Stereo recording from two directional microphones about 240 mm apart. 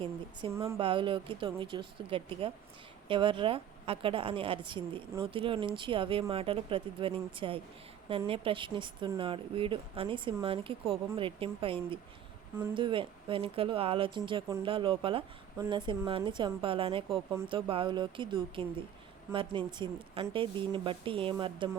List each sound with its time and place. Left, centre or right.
0.4 s a woman's voice: centre